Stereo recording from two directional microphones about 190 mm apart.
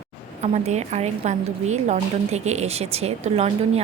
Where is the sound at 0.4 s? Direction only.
35° right (ahead or behind).